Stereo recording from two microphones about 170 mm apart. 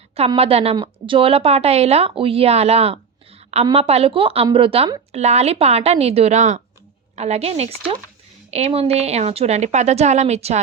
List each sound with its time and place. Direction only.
0.3 s speech: 35° right (ahead or behind)